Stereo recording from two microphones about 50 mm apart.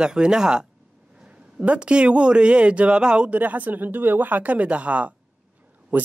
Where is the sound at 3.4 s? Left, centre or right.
Right.